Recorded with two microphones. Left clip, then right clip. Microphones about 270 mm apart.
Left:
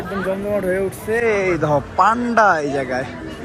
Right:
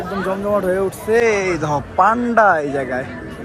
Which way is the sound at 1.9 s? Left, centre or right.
Centre.